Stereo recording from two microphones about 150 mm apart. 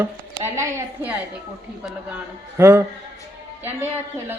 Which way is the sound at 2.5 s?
15° right (ahead or behind).